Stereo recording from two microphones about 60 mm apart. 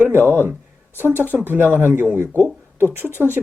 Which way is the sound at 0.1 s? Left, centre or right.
Right.